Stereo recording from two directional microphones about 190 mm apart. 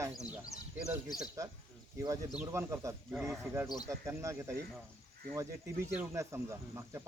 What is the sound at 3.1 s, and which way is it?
Speech, centre (ahead or behind).